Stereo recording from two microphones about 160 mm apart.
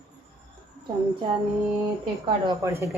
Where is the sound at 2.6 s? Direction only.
15° right (ahead or behind).